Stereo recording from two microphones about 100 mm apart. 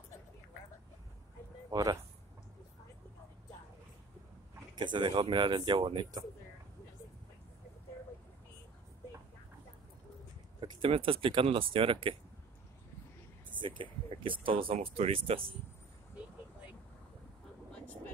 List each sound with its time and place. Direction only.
1.7 s speech: 40° right (ahead or behind)
4.7 s speech: 50° right (ahead or behind)
10.6 s speech: 60° right (ahead or behind)
13.6 s speech: 55° right (ahead or behind); by 15.4 s 70° right (ahead or behind)
17.7 s vehicle: 15° left (ahead or behind)